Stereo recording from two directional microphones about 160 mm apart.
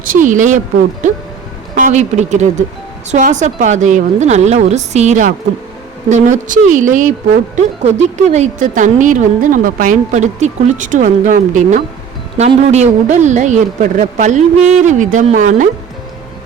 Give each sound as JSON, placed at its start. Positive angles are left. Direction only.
{"t": 0.0, "sound": "speech", "side_deg": -55}
{"t": 1.7, "sound": "a woman's voice", "side_deg": -50}